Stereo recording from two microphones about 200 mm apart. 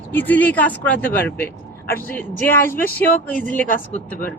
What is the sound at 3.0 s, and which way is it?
Speech, 45° left (ahead or behind).